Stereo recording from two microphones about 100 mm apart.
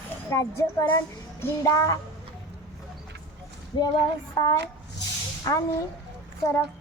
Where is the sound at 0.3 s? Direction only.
30° left (ahead or behind).